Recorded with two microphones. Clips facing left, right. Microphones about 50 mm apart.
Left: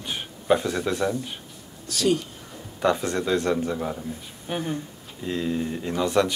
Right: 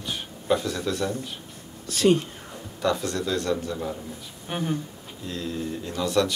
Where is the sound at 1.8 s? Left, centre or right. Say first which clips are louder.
Right 3 dB; right.